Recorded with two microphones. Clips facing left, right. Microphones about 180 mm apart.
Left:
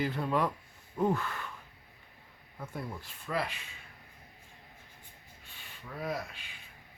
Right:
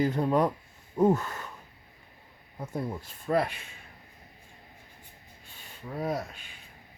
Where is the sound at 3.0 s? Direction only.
45° right (ahead or behind).